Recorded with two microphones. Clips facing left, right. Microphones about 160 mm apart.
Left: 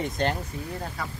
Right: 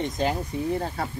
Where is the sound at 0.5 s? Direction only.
20° right (ahead or behind).